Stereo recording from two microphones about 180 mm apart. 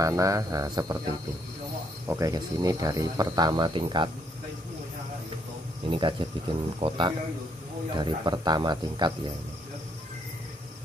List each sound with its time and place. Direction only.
0.0 s speech: 20° right (ahead or behind)
2.0 s speech: 15° right (ahead or behind)
5.9 s speech: 25° right (ahead or behind)